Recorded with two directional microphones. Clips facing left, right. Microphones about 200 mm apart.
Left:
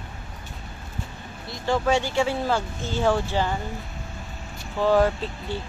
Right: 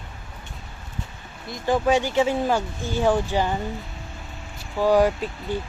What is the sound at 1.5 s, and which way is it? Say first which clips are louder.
Speech: right 2 dB; 15° right (ahead or behind).